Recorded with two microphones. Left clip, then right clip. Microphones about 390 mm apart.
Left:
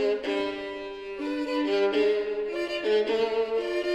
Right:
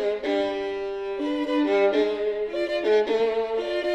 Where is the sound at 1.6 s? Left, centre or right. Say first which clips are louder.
Right 4 dB; left.